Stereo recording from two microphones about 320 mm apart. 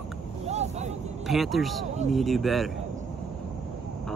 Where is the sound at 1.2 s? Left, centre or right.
Centre.